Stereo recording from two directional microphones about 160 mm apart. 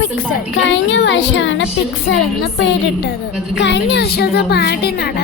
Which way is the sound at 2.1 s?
90° left.